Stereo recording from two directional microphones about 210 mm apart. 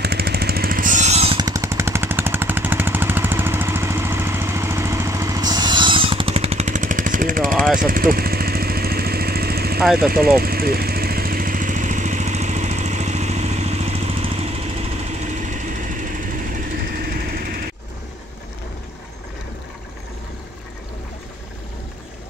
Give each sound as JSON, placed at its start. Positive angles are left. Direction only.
{"t": 0.0, "sound": "a sound", "side_deg": -50}
{"t": 7.5, "sound": "jackhammer", "side_deg": 0}
{"t": 7.8, "sound": "vehicle", "side_deg": -40}